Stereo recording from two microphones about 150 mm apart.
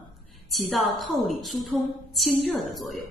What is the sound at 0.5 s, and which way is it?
A woman's voice, centre (ahead or behind).